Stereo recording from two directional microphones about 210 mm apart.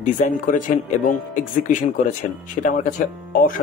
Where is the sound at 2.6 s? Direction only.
35° left (ahead or behind).